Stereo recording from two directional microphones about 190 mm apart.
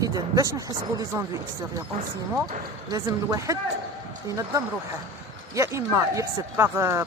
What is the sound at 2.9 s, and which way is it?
Speech, 20° right (ahead or behind).